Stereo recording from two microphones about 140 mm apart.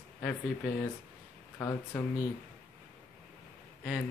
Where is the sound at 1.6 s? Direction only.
15° left (ahead or behind).